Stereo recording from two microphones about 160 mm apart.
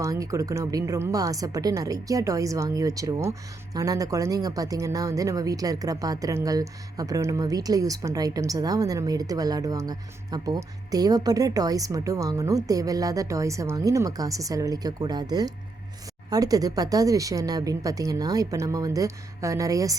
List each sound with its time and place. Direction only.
0.0 s speech: 20° right (ahead or behind)